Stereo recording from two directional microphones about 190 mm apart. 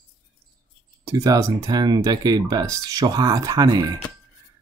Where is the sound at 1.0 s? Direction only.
15° right (ahead or behind).